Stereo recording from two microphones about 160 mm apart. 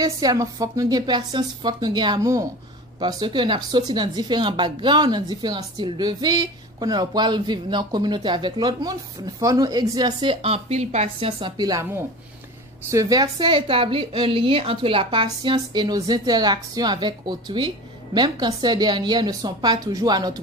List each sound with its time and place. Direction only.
0.0 s speech: 20° right (ahead or behind)